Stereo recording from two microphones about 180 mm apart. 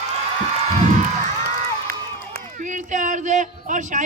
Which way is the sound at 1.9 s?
55° right (ahead or behind).